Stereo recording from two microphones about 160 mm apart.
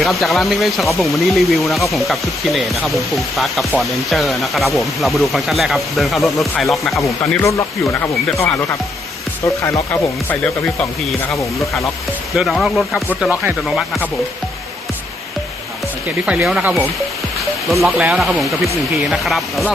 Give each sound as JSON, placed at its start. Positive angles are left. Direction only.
{"t": 0.0, "sound": "speech", "side_deg": 0}
{"t": 7.0, "sound": "speech", "side_deg": 20}
{"t": 9.6, "sound": "speech", "side_deg": 15}
{"t": 12.3, "sound": "speech", "side_deg": 0}
{"t": 16.5, "sound": "speech", "side_deg": -5}